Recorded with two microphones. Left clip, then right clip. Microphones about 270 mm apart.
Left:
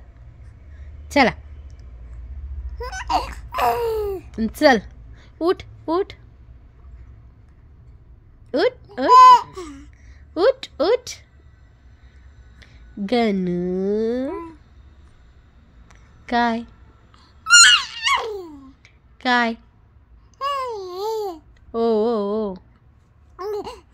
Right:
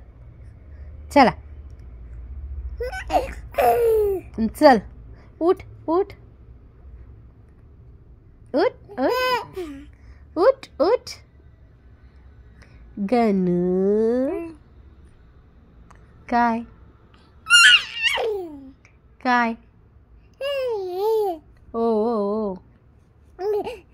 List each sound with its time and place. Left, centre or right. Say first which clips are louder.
1.1 s a woman's voice: right 2 dB; centre
2.8 s a child's voice: even; centre
8.5 s a child's voice: left 1 dB; centre
12.5 s speech: right 1 dB; centre
15.9 s a sound: even; centre
20.3 s babbling: even; centre
22.3 s speech: left 1 dB; centre
23.3 s babbling: right 4 dB; centre